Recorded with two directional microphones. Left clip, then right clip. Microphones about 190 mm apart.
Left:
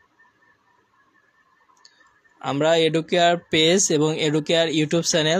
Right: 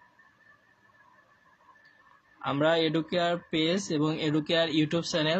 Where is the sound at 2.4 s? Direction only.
40° left (ahead or behind).